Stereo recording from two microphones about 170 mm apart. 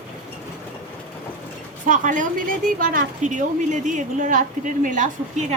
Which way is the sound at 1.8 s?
50° right (ahead or behind).